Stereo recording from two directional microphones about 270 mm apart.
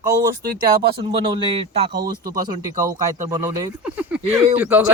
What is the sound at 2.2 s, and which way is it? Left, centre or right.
Speech, right.